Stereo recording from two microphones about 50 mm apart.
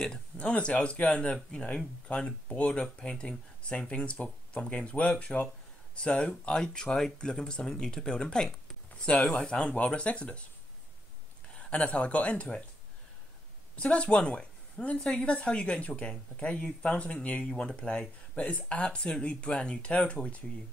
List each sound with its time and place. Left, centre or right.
0.4 s speech: left
11.5 s speech: left
13.7 s a woman's voice: left